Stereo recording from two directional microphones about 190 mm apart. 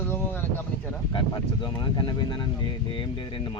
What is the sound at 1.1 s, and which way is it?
Speech, 25° left (ahead or behind).